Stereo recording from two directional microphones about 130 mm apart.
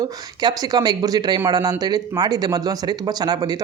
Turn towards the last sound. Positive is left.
turn(degrees=-30)  # may be behind; listen again after turning